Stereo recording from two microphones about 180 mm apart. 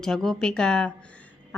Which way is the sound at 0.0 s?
Centre (ahead or behind).